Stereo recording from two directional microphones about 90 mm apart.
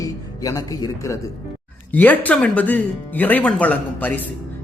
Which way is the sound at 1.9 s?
20° left (ahead or behind).